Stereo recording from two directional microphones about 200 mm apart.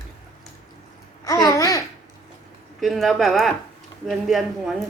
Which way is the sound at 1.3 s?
20° left (ahead or behind).